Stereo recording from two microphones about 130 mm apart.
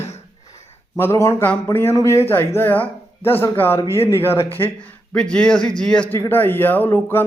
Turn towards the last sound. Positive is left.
turn(degrees=15)  # may be behind; listen again after turning